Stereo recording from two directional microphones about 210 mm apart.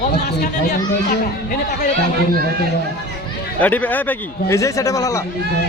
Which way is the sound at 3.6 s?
5° left (ahead or behind).